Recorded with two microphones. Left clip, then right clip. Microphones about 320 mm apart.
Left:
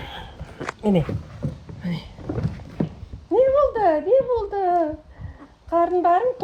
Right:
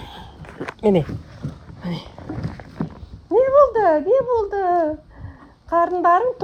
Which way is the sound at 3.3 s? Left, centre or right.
Centre.